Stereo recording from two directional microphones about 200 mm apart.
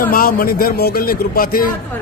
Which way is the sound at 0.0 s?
45° left (ahead or behind).